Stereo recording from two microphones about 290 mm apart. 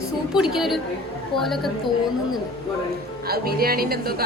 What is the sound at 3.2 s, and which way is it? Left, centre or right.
Speech, right.